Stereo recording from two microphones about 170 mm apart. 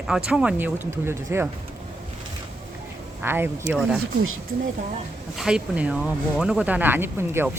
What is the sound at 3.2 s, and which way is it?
Speech, 15° right (ahead or behind).